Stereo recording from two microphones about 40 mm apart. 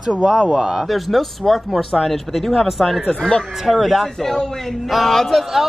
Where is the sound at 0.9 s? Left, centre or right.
Centre.